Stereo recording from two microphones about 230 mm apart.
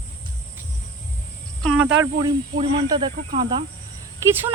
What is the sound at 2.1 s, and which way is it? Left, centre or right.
Speech, centre.